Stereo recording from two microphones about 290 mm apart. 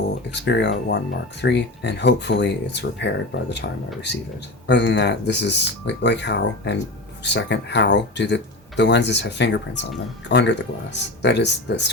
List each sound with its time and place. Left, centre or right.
0.3 s speech: left
4.6 s speech: left